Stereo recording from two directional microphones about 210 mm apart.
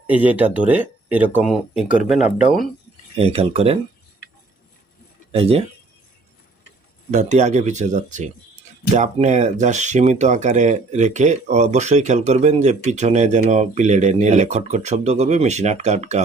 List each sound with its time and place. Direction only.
0.1 s speech: 5° right (ahead or behind)
3.2 s speech: 25° right (ahead or behind)
5.3 s speech: 30° right (ahead or behind)
7.1 s speech: 35° right (ahead or behind)